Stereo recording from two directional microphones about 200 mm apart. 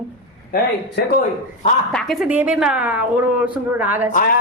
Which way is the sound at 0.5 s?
45° left (ahead or behind).